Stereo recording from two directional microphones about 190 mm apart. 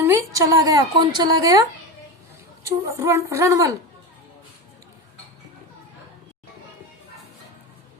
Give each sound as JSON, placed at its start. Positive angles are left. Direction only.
{"t": 0.0, "sound": "a woman's voice", "side_deg": -15}
{"t": 2.6, "sound": "a woman's voice", "side_deg": -15}